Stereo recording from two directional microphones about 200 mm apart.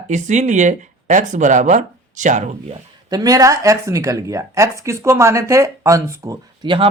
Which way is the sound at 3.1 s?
20° right (ahead or behind).